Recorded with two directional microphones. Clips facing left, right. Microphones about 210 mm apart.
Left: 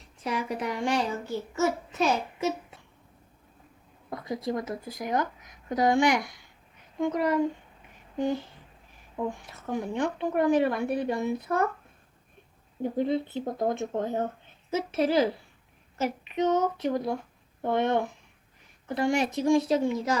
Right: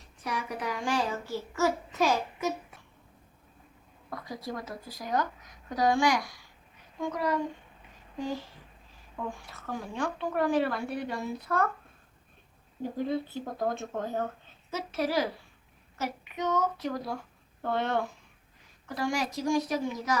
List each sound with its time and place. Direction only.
0.2 s a woman's voice: 25° left (ahead or behind)
4.1 s a woman's voice: 20° left (ahead or behind)
9.1 s a woman's voice: 20° left (ahead or behind)
13.0 s a woman's voice: 20° left (ahead or behind)